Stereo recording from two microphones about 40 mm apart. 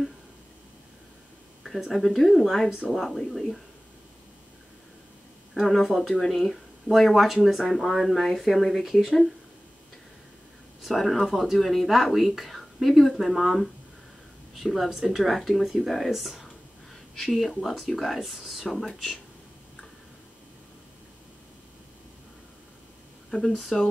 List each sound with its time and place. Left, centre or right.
1.9 s speech: centre
5.5 s speech: centre
10.8 s speech: centre
23.3 s speech: left
23.7 s speech: centre